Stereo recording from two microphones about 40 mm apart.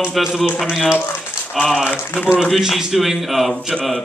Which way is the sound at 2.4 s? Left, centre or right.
Centre.